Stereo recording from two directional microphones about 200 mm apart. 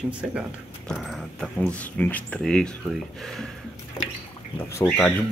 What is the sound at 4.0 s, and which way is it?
Water, 20° left (ahead or behind).